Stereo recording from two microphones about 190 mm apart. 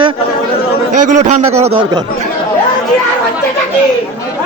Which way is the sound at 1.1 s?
40° right (ahead or behind).